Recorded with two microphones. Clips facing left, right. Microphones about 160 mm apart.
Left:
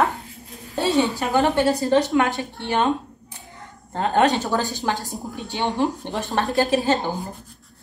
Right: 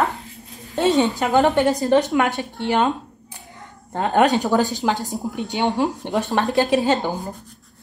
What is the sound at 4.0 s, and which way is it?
A woman's voice, 15° right (ahead or behind).